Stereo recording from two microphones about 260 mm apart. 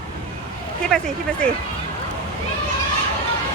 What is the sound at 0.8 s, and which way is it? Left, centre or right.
Speech, centre.